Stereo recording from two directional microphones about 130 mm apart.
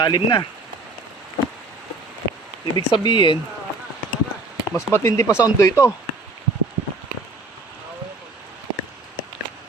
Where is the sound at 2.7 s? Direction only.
35° left (ahead or behind).